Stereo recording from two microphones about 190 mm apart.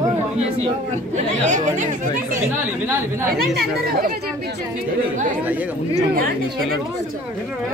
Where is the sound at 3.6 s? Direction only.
50° right (ahead or behind).